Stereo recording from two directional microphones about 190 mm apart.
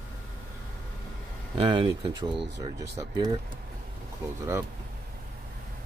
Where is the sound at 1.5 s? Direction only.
25° right (ahead or behind).